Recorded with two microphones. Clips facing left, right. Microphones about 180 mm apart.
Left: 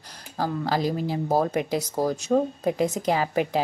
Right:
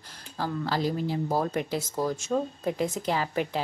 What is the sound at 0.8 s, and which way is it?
Speech, 10° left (ahead or behind).